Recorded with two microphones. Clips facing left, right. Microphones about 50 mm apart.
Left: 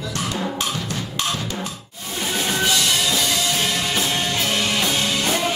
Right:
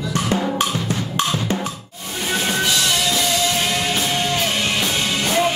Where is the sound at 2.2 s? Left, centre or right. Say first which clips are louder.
Right 2 dB; centre.